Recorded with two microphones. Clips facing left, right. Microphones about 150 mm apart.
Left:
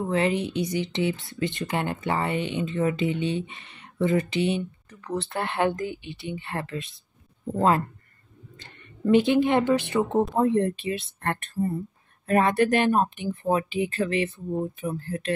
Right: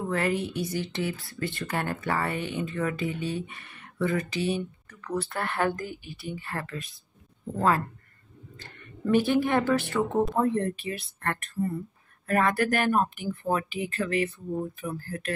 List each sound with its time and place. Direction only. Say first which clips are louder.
0.1 s speech: left 3 dB; 20° left (ahead or behind)
8.5 s speech: right 4 dB; 20° left (ahead or behind)